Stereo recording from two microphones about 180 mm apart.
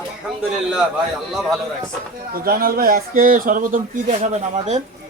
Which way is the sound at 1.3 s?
Centre (ahead or behind).